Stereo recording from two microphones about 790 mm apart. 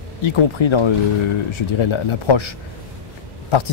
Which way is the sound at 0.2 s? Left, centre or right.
Left.